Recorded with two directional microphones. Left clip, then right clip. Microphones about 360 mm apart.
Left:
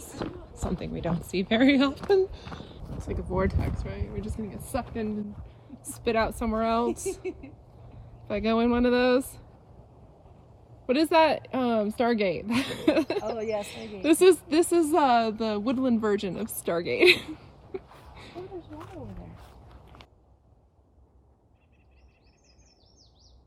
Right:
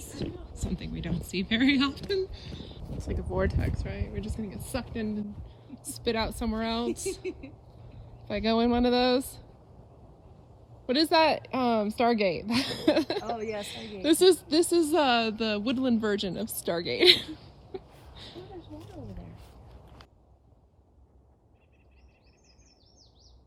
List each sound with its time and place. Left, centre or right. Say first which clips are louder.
0.0 s speech: left 2 dB; centre
10.8 s a woman's voice: left 2 dB; centre